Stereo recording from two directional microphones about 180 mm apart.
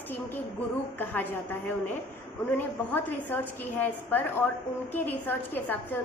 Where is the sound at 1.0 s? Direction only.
10° left (ahead or behind).